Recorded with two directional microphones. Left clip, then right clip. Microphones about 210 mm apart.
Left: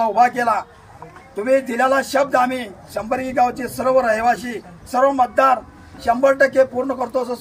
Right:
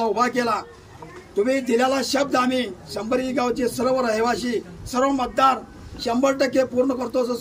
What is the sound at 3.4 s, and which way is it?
A man's voice, 20° left (ahead or behind).